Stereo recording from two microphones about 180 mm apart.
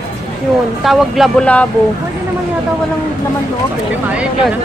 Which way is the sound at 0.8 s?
Centre (ahead or behind).